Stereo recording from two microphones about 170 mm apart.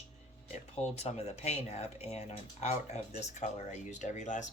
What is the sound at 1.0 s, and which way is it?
Speech, 40° left (ahead or behind).